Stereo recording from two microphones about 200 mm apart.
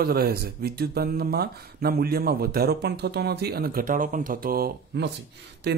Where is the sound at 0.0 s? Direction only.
50° right (ahead or behind).